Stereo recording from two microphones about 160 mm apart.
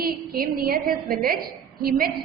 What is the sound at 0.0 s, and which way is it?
A woman's voice, 70° right (ahead or behind).